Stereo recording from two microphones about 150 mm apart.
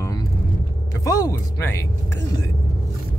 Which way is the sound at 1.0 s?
25° left (ahead or behind).